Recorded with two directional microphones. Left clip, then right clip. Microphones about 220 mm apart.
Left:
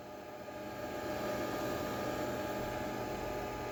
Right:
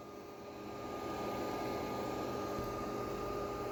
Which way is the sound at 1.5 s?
30° left (ahead or behind).